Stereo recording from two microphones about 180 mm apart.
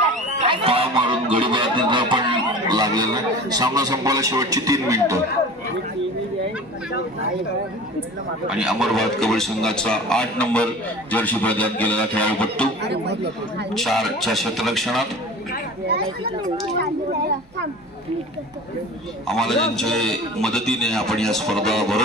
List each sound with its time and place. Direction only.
0.4 s music: 30° right (ahead or behind)
2.7 s a man's voice: 20° right (ahead or behind)
8.5 s a man's voice: 5° right (ahead or behind)
12.8 s speech: 70° right (ahead or behind)
13.7 s a man's voice: centre (ahead or behind)
19.2 s a man's voice: centre (ahead or behind)